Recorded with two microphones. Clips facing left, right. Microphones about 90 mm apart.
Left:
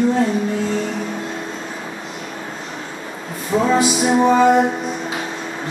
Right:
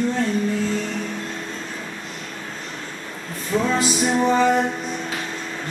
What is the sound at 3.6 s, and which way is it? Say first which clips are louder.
Music: left 6 dB; 5° left (ahead or behind).